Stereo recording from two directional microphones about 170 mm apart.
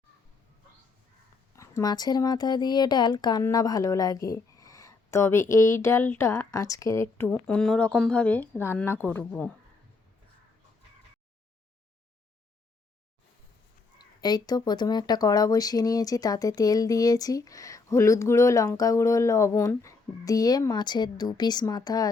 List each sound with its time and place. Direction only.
1.5 s speech: 20° left (ahead or behind)
7.3 s speech: 5° left (ahead or behind)
14.2 s speech: 25° left (ahead or behind)